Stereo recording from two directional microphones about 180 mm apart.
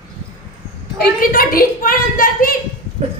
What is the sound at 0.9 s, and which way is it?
A woman's voice, 55° left (ahead or behind).